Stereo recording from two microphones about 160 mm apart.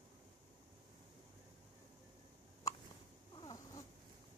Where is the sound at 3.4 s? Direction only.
25° left (ahead or behind).